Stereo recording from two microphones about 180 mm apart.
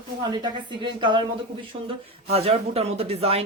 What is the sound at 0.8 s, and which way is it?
Speech, 25° right (ahead or behind).